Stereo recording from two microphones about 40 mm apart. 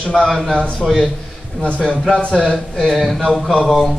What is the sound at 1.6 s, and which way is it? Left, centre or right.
Speech, left.